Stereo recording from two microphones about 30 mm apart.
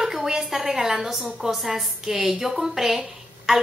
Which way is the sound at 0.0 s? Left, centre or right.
Centre.